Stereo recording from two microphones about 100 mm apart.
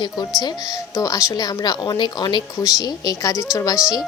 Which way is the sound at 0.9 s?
35° left (ahead or behind).